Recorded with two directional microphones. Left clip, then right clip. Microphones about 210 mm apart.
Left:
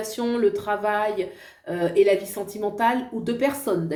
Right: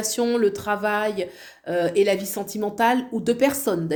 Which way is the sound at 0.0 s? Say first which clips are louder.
Right 2 dB; 50° right (ahead or behind).